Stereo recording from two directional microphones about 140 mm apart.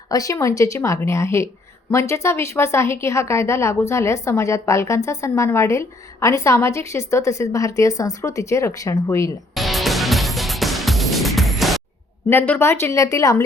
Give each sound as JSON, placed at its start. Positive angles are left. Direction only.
{"t": 0.1, "sound": "a woman's voice", "side_deg": 25}
{"t": 9.6, "sound": "music", "side_deg": 0}
{"t": 12.3, "sound": "a woman's voice", "side_deg": 15}